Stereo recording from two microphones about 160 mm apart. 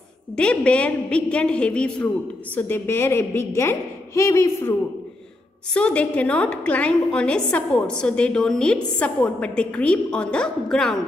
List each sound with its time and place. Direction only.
0.4 s a woman's voice: 5° left (ahead or behind)